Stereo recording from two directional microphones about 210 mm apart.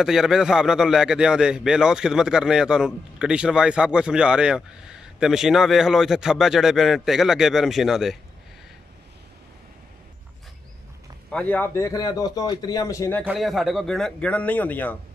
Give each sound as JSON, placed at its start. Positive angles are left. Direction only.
{"t": 0.0, "sound": "a man's voice", "side_deg": 0}
{"t": 11.2, "sound": "a man's voice", "side_deg": 5}
{"t": 13.2, "sound": "a man's voice", "side_deg": 0}